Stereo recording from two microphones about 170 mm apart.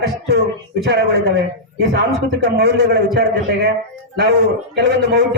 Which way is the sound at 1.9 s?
75° right (ahead or behind).